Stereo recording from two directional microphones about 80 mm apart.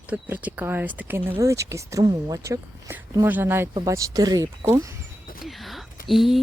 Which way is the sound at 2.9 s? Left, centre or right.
Right.